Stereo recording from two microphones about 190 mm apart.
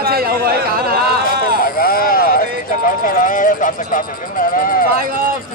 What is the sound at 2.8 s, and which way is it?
Speech, 45° left (ahead or behind).